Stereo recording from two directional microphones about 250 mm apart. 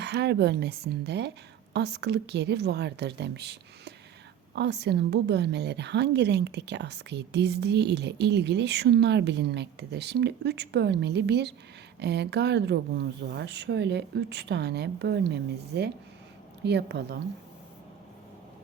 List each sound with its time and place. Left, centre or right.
0.0 s a woman's voice: right